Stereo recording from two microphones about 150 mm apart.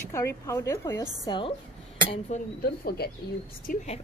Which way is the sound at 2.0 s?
45° left (ahead or behind).